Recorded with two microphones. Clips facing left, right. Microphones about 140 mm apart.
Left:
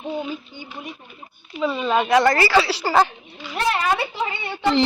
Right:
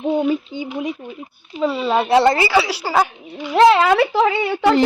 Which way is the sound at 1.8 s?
30° right (ahead or behind).